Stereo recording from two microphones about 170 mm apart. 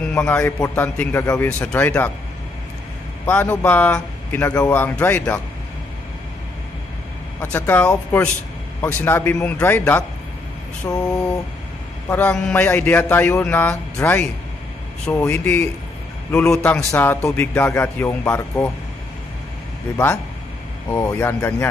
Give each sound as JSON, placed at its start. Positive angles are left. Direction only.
{"t": 0.1, "sound": "music", "side_deg": 5}
{"t": 0.4, "sound": "a man's voice", "side_deg": 15}
{"t": 1.2, "sound": "speech", "side_deg": 20}
{"t": 1.6, "sound": "a man's voice", "side_deg": 10}
{"t": 3.3, "sound": "a man's voice", "side_deg": 10}
{"t": 7.5, "sound": "a man's voice", "side_deg": 10}
{"t": 12.1, "sound": "a man's voice", "side_deg": 10}
{"t": 20.9, "sound": "a man's voice", "side_deg": 15}